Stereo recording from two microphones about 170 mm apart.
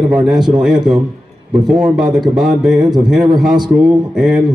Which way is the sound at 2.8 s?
25° right (ahead or behind).